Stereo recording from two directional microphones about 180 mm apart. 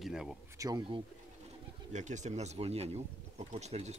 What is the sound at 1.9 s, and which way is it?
Speech, 40° right (ahead or behind).